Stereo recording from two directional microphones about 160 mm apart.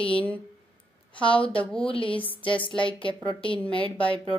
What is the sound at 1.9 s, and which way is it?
A woman's voice, 35° left (ahead or behind).